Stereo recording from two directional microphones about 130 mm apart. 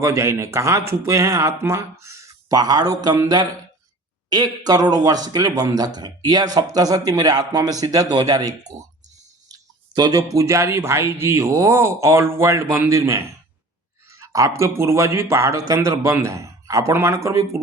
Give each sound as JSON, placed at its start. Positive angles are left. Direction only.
{"t": 0.0, "sound": "speech", "side_deg": -20}
{"t": 4.3, "sound": "speech", "side_deg": -30}